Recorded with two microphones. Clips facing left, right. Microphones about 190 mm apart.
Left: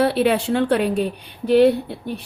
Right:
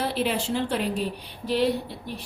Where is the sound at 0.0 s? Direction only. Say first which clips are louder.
Left 9 dB; 65° left (ahead or behind).